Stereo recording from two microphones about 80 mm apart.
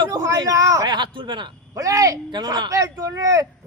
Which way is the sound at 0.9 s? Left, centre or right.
Right.